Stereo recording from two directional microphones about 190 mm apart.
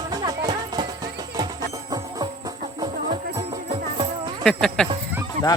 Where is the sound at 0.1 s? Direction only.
20° right (ahead or behind).